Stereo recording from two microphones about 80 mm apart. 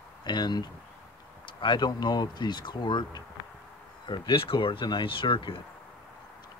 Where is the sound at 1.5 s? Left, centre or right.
Left.